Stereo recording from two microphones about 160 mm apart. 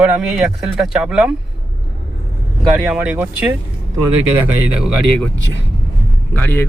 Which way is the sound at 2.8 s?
10° right (ahead or behind).